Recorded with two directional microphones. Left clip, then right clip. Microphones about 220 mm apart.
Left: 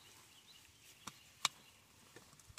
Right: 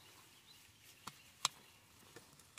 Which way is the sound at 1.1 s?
10° right (ahead or behind).